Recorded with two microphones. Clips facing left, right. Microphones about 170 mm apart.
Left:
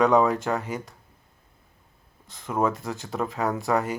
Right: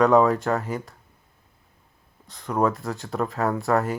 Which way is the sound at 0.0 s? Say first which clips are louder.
Right 2 dB; centre (ahead or behind).